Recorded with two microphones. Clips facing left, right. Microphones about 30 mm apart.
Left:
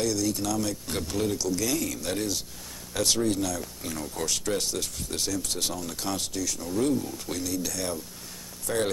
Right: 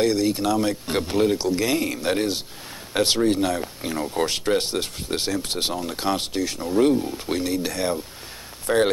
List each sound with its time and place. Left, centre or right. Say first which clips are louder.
0.0 s speech: right 7 dB; right